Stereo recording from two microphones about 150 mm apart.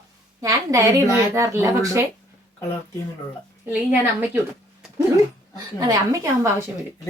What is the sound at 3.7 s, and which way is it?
Speech, 10° right (ahead or behind).